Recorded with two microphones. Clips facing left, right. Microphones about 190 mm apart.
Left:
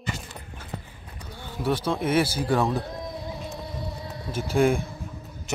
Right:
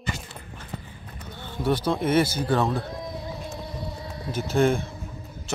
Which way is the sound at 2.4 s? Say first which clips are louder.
Even; 5° left (ahead or behind).